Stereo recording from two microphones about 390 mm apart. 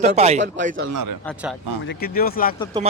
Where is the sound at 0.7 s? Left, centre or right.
Right.